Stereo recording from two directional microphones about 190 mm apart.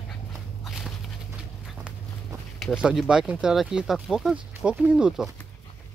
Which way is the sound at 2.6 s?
5° right (ahead or behind).